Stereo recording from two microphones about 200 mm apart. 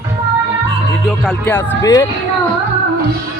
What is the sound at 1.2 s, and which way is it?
Speech, 5° left (ahead or behind).